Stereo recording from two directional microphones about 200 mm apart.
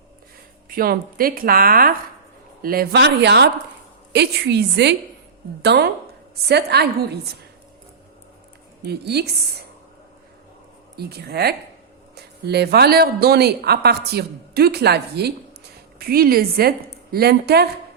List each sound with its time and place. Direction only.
0.7 s a woman's voice: 45° right (ahead or behind)
8.8 s speech: 55° right (ahead or behind)
10.9 s speech: 55° right (ahead or behind)